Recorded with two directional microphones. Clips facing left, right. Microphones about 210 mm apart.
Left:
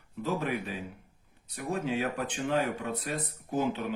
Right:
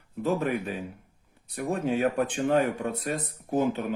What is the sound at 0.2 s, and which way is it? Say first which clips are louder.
Speech: right 5 dB; 50° right (ahead or behind).